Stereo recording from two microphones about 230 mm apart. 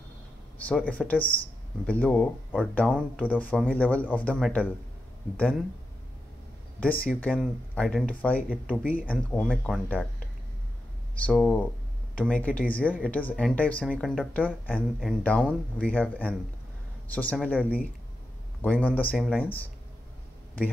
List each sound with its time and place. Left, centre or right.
0.6 s speech: centre
6.8 s speech: centre
8.5 s speech: centre
8.9 s speech: centre
11.1 s speech: centre
18.6 s speech: centre